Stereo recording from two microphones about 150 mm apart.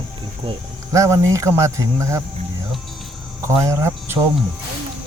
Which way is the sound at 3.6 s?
20° right (ahead or behind).